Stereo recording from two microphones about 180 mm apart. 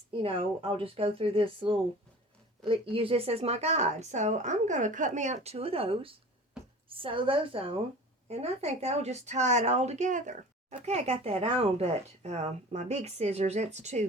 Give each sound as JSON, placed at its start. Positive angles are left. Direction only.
{"t": 0.2, "sound": "a woman's voice", "side_deg": -30}